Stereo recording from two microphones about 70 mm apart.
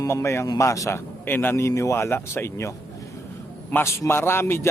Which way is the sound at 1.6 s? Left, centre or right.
Left.